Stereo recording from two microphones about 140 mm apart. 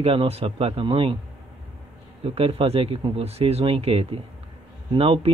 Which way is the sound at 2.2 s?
45° right (ahead or behind).